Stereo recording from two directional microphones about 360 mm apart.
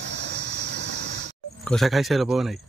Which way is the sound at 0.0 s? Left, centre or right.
Right.